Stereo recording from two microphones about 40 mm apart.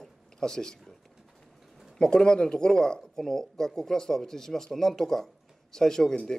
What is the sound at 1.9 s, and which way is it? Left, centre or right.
Speech, centre.